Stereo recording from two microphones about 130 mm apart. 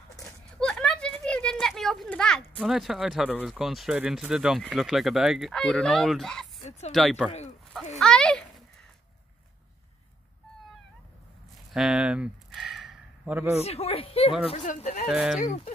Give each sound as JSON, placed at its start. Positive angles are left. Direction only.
{"t": 0.1, "sound": "a sound", "side_deg": 5}
{"t": 2.6, "sound": "speech", "side_deg": -5}
{"t": 11.7, "sound": "speech", "side_deg": -5}
{"t": 12.4, "sound": "a sound", "side_deg": 0}
{"t": 13.3, "sound": "speech", "side_deg": -10}
{"t": 13.7, "sound": "speech", "side_deg": 50}
{"t": 14.8, "sound": "speech", "side_deg": 70}
{"t": 15.0, "sound": "speech", "side_deg": -5}
{"t": 15.3, "sound": "speech", "side_deg": 85}